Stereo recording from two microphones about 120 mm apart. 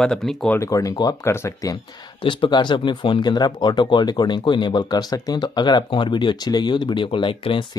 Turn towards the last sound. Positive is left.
turn(degrees=45)  # may be behind; listen again after turning